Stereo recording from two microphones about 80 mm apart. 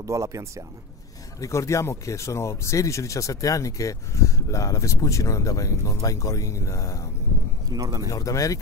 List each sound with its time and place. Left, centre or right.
0.0 s speech: right
1.4 s speech: left
7.7 s speech: right
8.1 s speech: left